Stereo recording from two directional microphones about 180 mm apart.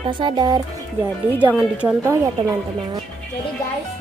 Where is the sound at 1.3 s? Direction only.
10° right (ahead or behind).